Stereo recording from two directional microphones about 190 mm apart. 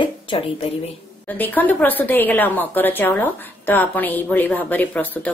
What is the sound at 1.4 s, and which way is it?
A woman's voice, 10° left (ahead or behind).